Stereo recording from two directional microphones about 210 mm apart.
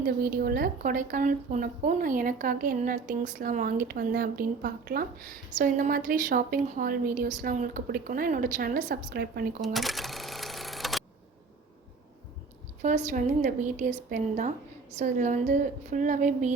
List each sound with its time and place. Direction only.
0.0 s a woman's voice: 45° right (ahead or behind)
9.6 s cash register: centre (ahead or behind)
12.8 s a woman's voice: 35° right (ahead or behind)